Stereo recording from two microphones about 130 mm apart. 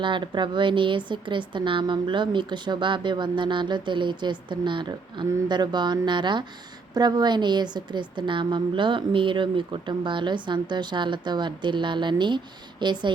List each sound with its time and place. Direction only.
0.0 s a woman's voice: 40° right (ahead or behind)